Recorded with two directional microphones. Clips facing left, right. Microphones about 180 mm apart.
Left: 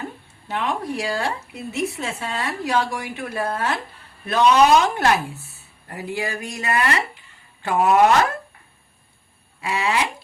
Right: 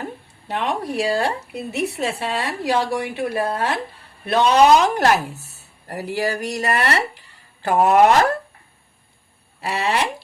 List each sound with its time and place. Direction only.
0.7 s speech: 35° right (ahead or behind)
1.7 s speech: 70° right (ahead or behind)
2.0 s speech: 35° right (ahead or behind)
9.6 s speech: 35° right (ahead or behind)